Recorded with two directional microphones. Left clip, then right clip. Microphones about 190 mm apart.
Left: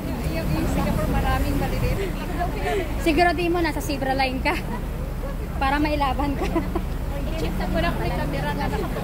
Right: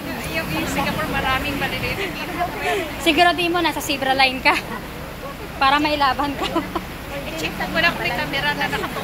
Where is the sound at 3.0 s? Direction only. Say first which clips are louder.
Right 4 dB; 5° right (ahead or behind).